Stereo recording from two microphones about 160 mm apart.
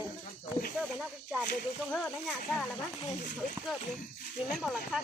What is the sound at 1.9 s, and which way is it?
Speech, 5° left (ahead or behind).